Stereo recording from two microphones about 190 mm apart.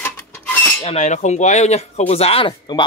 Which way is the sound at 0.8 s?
35° left (ahead or behind).